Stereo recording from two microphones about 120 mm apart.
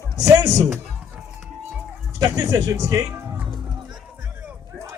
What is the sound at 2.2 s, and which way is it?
Speech, 30° right (ahead or behind).